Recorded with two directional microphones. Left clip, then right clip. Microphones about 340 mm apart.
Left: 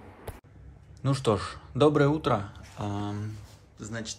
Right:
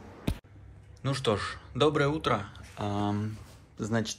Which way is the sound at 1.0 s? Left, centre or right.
Centre.